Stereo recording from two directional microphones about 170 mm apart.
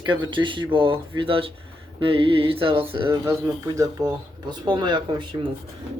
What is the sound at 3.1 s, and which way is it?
Speech, 20° right (ahead or behind).